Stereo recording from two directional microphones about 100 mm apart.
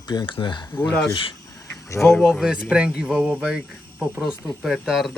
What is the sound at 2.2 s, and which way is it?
Speech, 5° right (ahead or behind).